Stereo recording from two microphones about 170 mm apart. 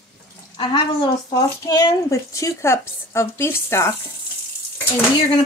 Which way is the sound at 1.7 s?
20° left (ahead or behind).